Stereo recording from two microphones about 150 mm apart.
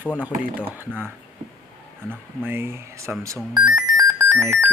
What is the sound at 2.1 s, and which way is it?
Speech, 15° right (ahead or behind).